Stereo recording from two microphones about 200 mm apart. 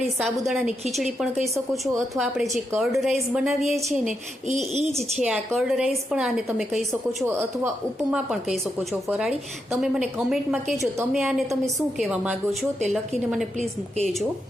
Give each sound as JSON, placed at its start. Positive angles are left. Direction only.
{"t": 0.2, "sound": "a woman's voice", "side_deg": 0}
{"t": 4.4, "sound": "speech", "side_deg": -35}
{"t": 4.8, "sound": "a woman's voice", "side_deg": 0}